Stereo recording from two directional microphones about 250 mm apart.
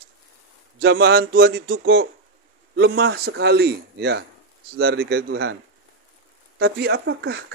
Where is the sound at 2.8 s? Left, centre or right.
Right.